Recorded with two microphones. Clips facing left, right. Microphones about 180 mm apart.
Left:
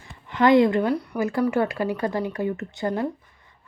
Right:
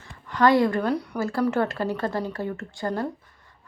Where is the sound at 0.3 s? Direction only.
20° left (ahead or behind).